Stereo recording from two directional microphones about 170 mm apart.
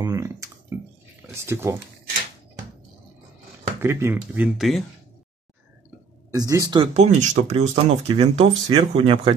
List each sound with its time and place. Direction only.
0.0 s a sound: 20° right (ahead or behind)
1.3 s speech: 15° right (ahead or behind)
3.8 s speech: 15° right (ahead or behind)
6.3 s speech: 20° right (ahead or behind)
6.9 s speech: 40° right (ahead or behind)